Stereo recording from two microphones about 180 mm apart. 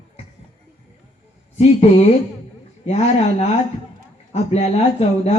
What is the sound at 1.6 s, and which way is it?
Speech, 35° left (ahead or behind).